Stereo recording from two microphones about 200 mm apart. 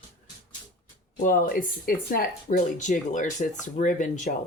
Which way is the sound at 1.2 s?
45° left (ahead or behind).